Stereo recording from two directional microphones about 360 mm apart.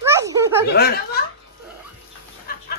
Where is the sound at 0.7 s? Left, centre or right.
Left.